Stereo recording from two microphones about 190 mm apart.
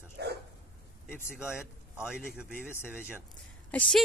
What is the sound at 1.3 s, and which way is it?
Speech, 5° right (ahead or behind).